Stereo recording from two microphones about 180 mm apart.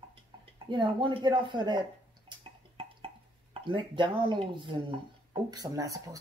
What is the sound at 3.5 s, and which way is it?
Speech, 25° right (ahead or behind).